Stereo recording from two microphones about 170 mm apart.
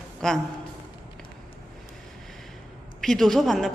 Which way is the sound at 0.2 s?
5° left (ahead or behind).